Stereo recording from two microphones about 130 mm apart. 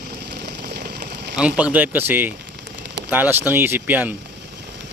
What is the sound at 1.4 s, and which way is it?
Speech, 10° right (ahead or behind).